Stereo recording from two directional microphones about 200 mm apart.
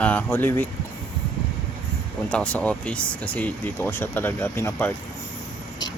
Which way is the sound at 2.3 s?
5° left (ahead or behind).